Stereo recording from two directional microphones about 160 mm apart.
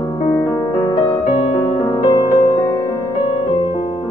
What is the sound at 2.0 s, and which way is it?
Music, 25° left (ahead or behind).